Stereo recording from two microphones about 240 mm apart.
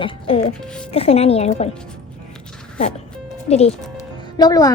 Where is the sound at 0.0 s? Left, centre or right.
Left.